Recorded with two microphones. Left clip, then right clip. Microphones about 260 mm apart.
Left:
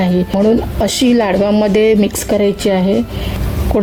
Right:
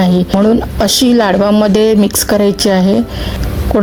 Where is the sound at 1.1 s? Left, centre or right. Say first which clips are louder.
Right 1 dB; right.